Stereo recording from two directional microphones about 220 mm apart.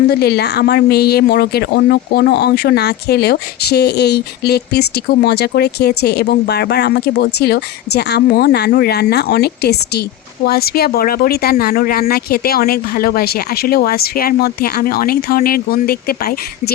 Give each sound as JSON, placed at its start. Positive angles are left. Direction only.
{"t": 0.1, "sound": "speech", "side_deg": 50}